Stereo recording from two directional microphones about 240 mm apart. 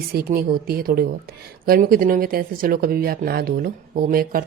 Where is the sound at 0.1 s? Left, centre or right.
Right.